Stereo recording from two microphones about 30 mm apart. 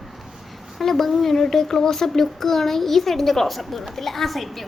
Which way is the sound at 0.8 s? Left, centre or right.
Centre.